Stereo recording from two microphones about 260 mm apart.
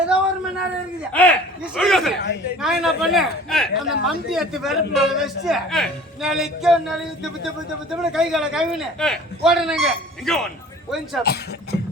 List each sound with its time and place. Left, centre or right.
1.1 s speech: centre
8.1 s speech: centre
11.2 s speech: left